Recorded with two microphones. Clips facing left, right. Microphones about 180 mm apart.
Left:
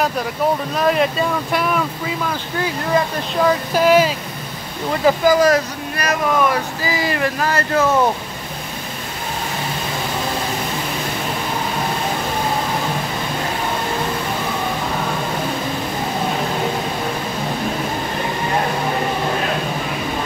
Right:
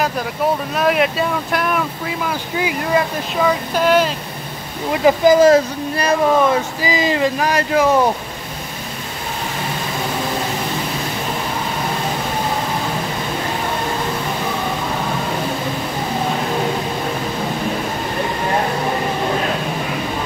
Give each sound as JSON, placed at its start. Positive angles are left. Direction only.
{"t": 0.7, "sound": "speech", "side_deg": -5}
{"t": 3.3, "sound": "speech", "side_deg": 5}
{"t": 5.0, "sound": "speech", "side_deg": -20}